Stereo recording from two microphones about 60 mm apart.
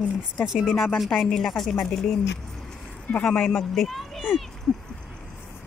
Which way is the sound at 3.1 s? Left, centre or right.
Left.